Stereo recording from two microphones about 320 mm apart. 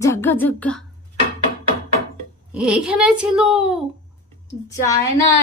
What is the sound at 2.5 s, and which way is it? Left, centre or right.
Speech, centre.